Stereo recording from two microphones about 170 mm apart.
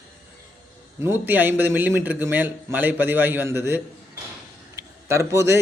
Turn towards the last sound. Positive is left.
turn(degrees=-15)  # may be behind; listen again after turning